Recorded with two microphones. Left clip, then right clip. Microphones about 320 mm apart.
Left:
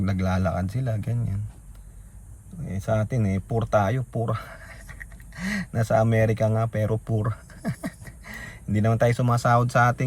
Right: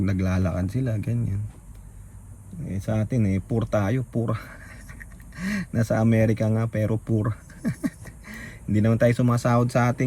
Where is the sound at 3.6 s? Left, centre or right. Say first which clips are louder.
Left 5 dB; centre.